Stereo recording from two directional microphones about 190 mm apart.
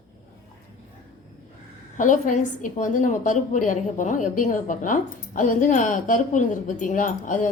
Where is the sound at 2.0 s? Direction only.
40° left (ahead or behind).